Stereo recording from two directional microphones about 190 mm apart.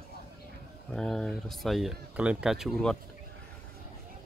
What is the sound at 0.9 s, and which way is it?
Speech, 5° left (ahead or behind).